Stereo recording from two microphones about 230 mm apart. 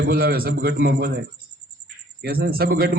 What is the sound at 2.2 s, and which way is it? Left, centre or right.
Speech, right.